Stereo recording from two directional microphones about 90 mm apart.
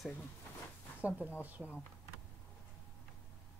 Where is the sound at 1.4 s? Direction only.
20° right (ahead or behind).